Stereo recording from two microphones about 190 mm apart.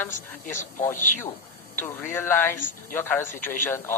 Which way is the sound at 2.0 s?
10° left (ahead or behind).